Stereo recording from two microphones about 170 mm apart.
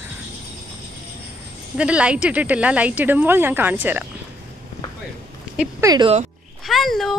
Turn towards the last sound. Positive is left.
turn(degrees=0)  # may be behind; listen again after turning